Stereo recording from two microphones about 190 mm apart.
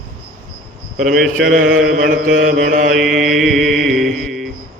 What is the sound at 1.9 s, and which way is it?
Mantra, 45° right (ahead or behind).